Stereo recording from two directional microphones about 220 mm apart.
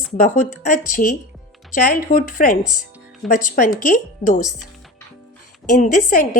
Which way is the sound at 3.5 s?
35° left (ahead or behind).